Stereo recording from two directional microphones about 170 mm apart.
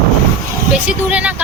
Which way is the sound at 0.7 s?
5° right (ahead or behind).